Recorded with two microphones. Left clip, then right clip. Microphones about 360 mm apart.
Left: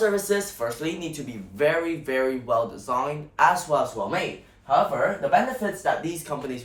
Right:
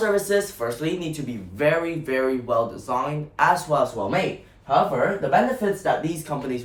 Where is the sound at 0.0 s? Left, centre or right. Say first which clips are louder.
Right 2 dB; centre.